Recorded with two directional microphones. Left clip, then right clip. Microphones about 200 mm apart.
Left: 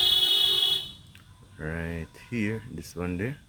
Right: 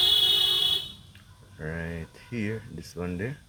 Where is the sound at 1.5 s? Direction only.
30° left (ahead or behind).